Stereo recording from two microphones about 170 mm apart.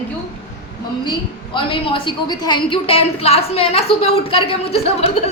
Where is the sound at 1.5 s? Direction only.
30° left (ahead or behind).